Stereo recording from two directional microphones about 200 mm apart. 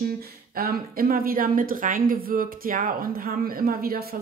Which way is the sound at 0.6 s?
50° right (ahead or behind).